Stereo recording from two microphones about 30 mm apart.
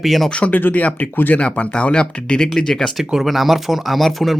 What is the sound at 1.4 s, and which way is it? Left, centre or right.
Speech, left.